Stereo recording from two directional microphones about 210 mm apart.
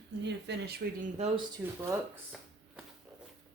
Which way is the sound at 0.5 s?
55° right (ahead or behind).